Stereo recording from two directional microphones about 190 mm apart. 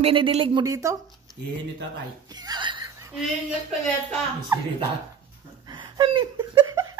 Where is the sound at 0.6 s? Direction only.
15° right (ahead or behind).